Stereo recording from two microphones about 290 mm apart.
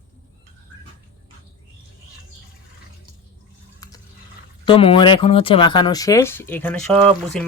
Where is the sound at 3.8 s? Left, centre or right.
Centre.